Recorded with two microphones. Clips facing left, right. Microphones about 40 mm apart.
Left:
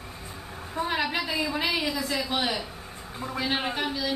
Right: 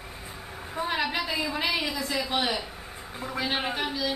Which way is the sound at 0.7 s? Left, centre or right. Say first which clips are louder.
Left 1 dB; centre.